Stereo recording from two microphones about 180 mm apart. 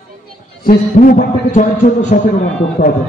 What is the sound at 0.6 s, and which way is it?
A man's voice, 50° left (ahead or behind).